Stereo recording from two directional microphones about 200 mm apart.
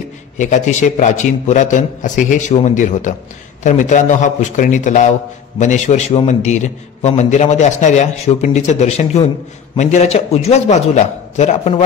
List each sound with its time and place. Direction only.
0.4 s a man's voice: 35° left (ahead or behind)